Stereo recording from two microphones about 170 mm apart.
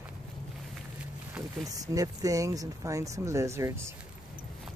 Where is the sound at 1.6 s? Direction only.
20° right (ahead or behind).